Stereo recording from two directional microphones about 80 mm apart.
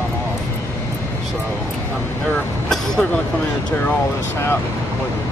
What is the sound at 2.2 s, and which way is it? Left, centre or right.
Speech, centre.